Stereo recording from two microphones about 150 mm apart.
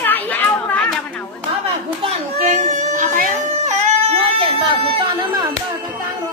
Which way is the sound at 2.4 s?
50° right (ahead or behind).